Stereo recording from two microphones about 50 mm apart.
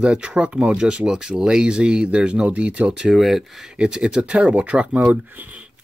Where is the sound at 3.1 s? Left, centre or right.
Centre.